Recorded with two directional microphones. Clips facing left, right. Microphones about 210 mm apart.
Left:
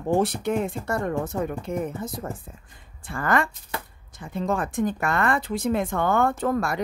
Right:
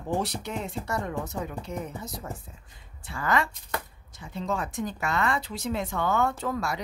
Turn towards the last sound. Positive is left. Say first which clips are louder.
# left 6 dB
turn(degrees=55)  # may be behind; listen again after turning